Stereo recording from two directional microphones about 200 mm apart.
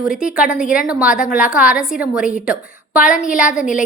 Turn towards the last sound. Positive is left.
turn(degrees=-5)  # may be behind; listen again after turning